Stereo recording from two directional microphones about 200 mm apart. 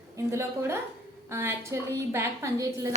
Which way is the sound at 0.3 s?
15° right (ahead or behind).